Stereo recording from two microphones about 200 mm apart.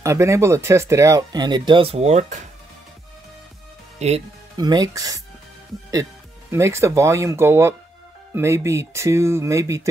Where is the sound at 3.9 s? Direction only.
30° right (ahead or behind).